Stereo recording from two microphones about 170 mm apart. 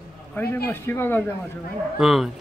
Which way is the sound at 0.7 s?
15° left (ahead or behind).